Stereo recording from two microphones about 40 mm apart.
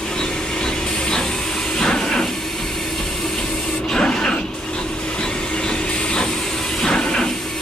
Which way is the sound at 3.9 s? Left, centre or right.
Centre.